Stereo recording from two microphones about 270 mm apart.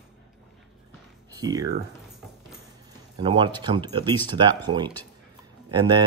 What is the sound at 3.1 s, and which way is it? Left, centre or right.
Speech, centre.